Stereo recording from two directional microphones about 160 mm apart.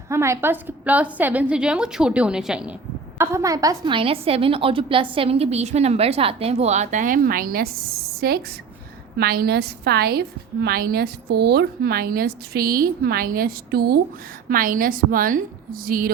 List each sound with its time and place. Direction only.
0.1 s a woman's voice: 15° right (ahead or behind)
3.2 s a woman's voice: 20° right (ahead or behind); by 14.0 s 75° right (ahead or behind)
14.5 s a woman's voice: 60° right (ahead or behind)